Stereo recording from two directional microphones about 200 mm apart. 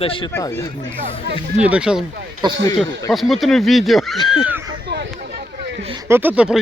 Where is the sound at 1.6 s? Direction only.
5° right (ahead or behind).